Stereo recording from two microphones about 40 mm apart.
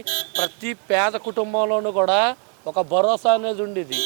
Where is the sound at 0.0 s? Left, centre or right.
Centre.